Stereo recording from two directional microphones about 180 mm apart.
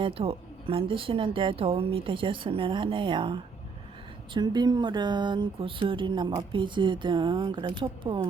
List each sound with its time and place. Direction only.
0.0 s speech: 30° right (ahead or behind)